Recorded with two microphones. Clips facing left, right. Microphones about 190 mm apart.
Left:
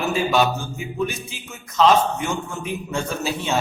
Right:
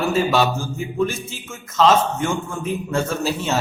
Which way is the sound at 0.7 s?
Centre (ahead or behind).